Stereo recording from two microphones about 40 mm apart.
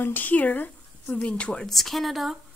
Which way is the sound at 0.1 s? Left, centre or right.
Left.